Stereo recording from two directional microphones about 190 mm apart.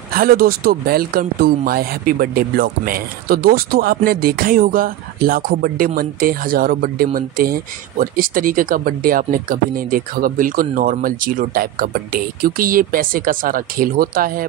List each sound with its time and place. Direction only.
0.1 s speech: 50° right (ahead or behind)